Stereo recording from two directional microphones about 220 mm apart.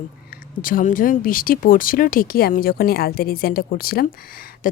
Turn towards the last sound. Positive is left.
turn(degrees=40)  # may be behind; listen again after turning